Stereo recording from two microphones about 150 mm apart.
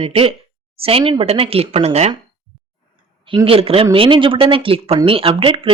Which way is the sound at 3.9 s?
35° right (ahead or behind).